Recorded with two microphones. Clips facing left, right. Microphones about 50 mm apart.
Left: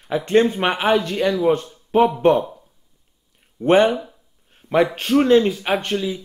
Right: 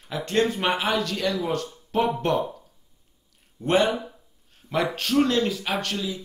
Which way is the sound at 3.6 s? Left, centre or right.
Left.